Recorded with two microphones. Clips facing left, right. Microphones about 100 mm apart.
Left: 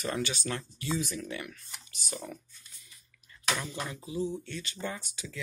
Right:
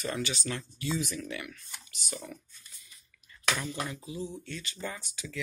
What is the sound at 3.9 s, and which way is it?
Speech, 30° left (ahead or behind).